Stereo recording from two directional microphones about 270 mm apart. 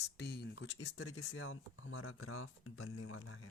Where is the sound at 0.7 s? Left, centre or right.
Left.